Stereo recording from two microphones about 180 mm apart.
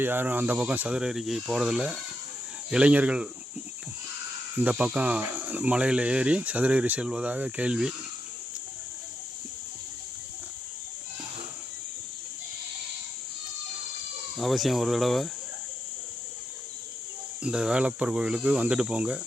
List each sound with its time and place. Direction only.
0.0 s speech: 10° right (ahead or behind)
4.6 s speech: 5° right (ahead or behind)
14.3 s speech: centre (ahead or behind)
17.4 s speech: 5° right (ahead or behind)